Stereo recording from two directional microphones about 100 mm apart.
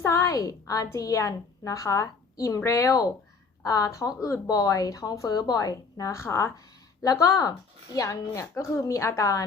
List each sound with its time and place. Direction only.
0.0 s a woman's voice: 30° left (ahead or behind)